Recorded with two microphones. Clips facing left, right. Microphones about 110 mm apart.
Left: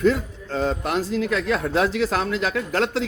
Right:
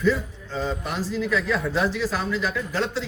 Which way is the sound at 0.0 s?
70° left (ahead or behind).